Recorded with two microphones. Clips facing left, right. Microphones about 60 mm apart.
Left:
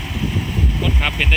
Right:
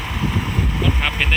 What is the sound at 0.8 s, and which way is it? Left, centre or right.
Vehicle, centre.